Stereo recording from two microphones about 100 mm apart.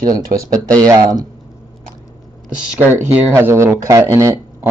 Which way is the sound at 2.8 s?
20° right (ahead or behind).